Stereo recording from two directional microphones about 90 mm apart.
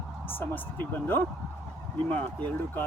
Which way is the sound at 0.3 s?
20° left (ahead or behind).